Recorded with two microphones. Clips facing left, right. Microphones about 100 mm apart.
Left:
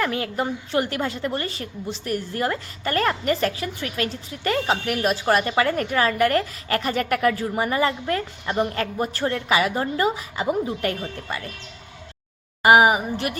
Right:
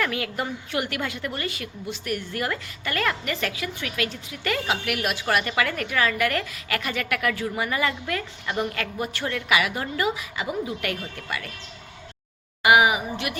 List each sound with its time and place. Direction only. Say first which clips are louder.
0.0 s a woman's voice: left 3 dB; 30° left (ahead or behind)
12.6 s a woman's voice: left 3 dB; 40° left (ahead or behind)